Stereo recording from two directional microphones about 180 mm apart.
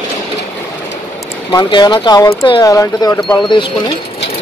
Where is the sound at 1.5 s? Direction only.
25° left (ahead or behind).